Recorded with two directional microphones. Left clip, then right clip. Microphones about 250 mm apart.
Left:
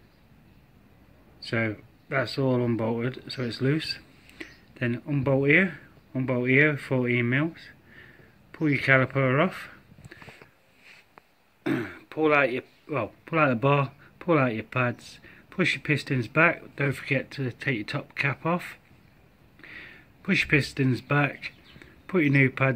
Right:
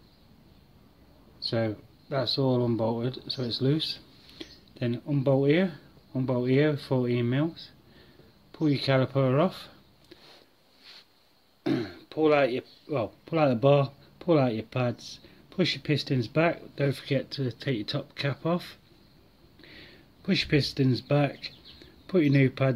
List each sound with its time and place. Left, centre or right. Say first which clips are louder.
1.5 s speech: left 2 dB; centre
11.6 s throat clearing: left 1 dB; centre
13.7 s speech: right 2 dB; centre
15.2 s a sound: left 3 dB; centre
16.1 s speech: left 4 dB; centre
19.6 s a sound: left 6 dB; centre
20.7 s speech: left 1 dB; centre